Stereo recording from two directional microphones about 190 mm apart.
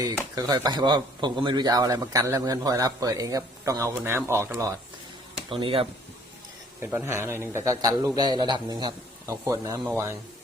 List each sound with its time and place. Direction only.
0.3 s speech: 20° right (ahead or behind)
5.5 s speech: 30° right (ahead or behind)
6.7 s a man's voice: 15° right (ahead or behind)